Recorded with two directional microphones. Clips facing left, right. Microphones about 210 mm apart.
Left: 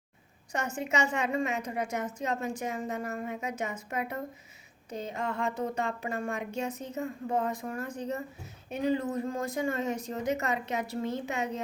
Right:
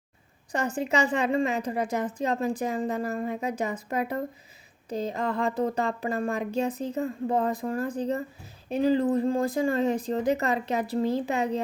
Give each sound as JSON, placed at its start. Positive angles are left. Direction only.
{"t": 0.5, "sound": "a woman's voice", "side_deg": -35}